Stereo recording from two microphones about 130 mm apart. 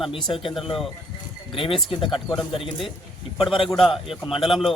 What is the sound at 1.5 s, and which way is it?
Speech, 45° left (ahead or behind).